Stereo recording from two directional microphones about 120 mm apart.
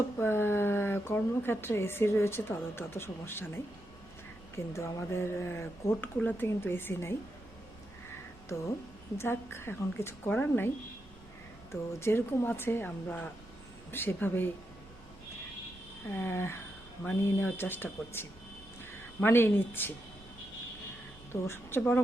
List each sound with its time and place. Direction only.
0.2 s speech: 20° left (ahead or behind)
9.1 s speech: 20° left (ahead or behind)
11.7 s speech: 20° left (ahead or behind)
16.1 s speech: 20° left (ahead or behind)
21.4 s speech: 20° left (ahead or behind)